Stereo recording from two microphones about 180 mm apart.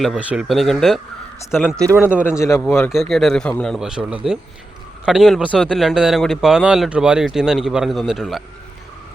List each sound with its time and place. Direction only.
0.0 s a man's voice: 5° right (ahead or behind)
1.8 s a man's voice: 15° right (ahead or behind)
2.2 s a man's voice: 15° left (ahead or behind)
2.9 s speech: centre (ahead or behind)